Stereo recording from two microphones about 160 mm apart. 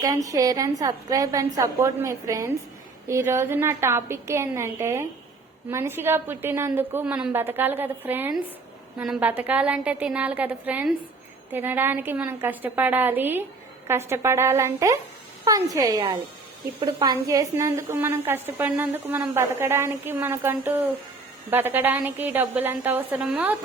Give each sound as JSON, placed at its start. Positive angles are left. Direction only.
{"t": 0.0, "sound": "a woman's voice", "side_deg": -20}